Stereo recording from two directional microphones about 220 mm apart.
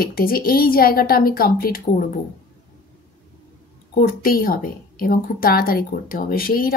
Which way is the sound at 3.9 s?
40° left (ahead or behind).